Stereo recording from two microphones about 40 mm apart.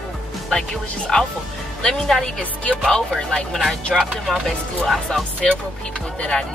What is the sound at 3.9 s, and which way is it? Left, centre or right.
Speech, centre.